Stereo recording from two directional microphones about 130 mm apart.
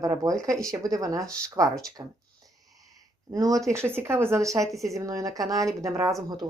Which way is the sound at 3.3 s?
25° right (ahead or behind).